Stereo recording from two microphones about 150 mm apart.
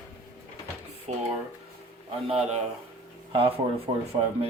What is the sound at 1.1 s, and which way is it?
Speech, 45° right (ahead or behind).